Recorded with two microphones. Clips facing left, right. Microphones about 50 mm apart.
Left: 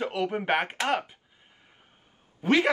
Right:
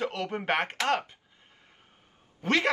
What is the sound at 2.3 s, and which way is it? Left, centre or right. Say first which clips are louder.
Speech: left 3 dB; centre.